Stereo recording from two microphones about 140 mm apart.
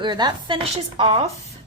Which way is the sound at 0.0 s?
30° right (ahead or behind).